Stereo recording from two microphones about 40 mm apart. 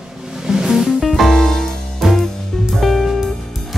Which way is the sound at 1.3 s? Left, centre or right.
Centre.